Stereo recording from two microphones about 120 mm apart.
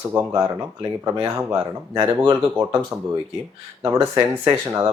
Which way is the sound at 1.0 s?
30° right (ahead or behind).